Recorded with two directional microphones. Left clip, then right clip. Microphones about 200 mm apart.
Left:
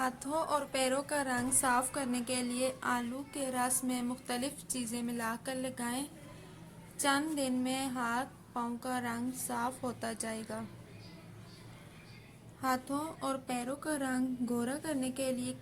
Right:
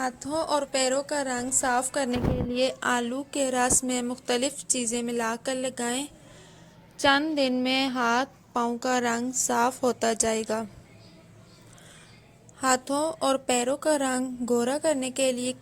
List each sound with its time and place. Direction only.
0.0 s a woman's voice: 20° right (ahead or behind); by 10.7 s 40° right (ahead or behind)
12.6 s a woman's voice: 40° right (ahead or behind)